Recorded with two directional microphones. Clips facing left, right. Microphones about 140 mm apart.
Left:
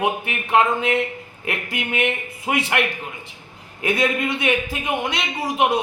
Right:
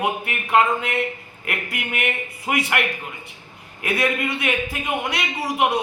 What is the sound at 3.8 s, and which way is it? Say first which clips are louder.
A man's voice: left 2 dB; 25° left (ahead or behind).